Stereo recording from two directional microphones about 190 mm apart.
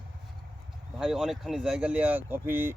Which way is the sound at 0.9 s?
5° right (ahead or behind).